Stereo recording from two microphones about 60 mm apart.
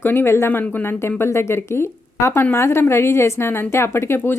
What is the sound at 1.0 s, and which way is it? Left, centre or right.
Speech, left.